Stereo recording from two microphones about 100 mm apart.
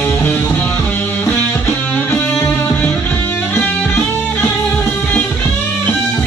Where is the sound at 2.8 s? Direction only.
15° left (ahead or behind).